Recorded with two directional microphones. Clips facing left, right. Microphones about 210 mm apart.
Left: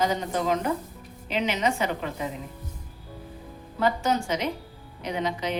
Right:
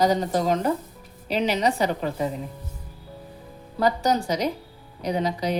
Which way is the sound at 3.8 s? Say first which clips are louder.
Right 3 dB; 40° right (ahead or behind).